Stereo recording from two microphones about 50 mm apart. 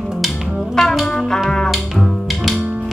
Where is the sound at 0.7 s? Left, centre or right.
Centre.